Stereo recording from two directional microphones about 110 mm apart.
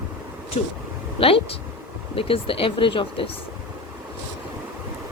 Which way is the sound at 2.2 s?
55° left (ahead or behind).